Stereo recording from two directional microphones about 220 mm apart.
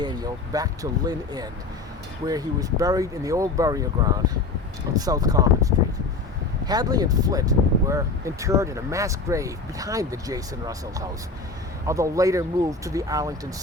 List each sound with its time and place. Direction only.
0.0 s speech: 20° right (ahead or behind)